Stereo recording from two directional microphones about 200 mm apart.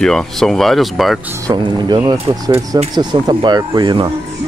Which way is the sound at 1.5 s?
20° right (ahead or behind).